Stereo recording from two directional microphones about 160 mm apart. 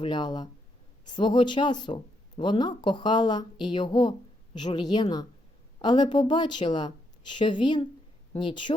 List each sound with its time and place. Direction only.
0.0 s a woman's voice: 30° left (ahead or behind)